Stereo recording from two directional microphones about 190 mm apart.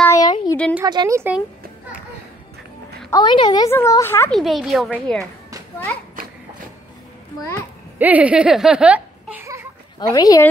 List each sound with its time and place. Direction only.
0.0 s a sound: 20° left (ahead or behind)
0.8 s speech: 20° right (ahead or behind)
3.1 s a woman's voice: 25° left (ahead or behind)
4.3 s speech: centre (ahead or behind)
8.0 s speech: 10° right (ahead or behind)
9.9 s a woman's voice: 20° left (ahead or behind)